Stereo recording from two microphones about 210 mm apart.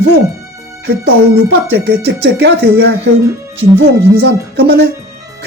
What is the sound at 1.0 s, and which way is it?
Speech, 55° right (ahead or behind).